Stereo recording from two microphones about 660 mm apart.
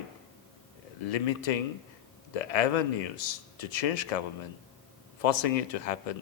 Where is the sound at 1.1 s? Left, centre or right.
Left.